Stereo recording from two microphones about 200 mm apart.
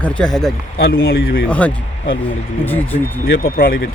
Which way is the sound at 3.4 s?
45° left (ahead or behind).